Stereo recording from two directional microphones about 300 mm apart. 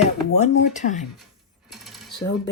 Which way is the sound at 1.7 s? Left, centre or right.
Centre.